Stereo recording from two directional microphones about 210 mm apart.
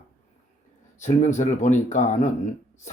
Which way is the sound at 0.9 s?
35° left (ahead or behind).